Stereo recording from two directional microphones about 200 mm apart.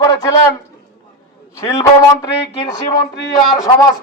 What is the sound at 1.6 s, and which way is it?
Speech, 15° left (ahead or behind).